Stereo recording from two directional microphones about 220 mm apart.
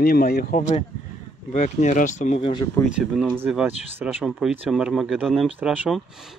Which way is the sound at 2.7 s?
Centre (ahead or behind).